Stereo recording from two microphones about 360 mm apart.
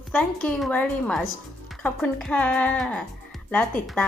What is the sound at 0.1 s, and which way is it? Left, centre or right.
Speech, centre.